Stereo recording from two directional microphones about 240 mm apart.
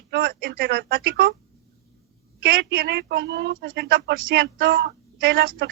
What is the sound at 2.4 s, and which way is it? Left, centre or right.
A woman's voice, right.